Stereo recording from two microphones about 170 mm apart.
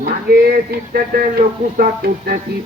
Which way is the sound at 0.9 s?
60° right (ahead or behind).